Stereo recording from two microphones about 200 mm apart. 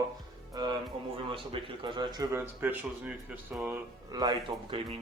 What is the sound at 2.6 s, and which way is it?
Speech, 10° right (ahead or behind).